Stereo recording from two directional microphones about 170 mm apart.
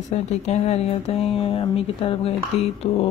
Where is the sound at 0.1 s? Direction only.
40° left (ahead or behind).